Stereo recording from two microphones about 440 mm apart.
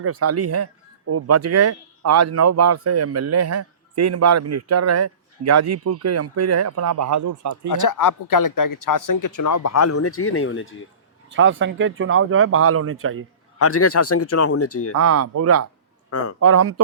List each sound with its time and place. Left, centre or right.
0.0 s speech: right
7.7 s speech: left
11.3 s speech: right
13.6 s speech: left
14.9 s speech: right